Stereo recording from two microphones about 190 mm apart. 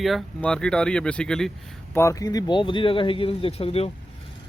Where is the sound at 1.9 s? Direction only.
15° left (ahead or behind); by 3.9 s 30° left (ahead or behind).